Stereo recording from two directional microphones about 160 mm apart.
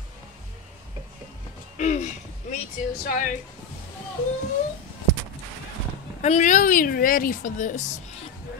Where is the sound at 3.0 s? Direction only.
55° left (ahead or behind).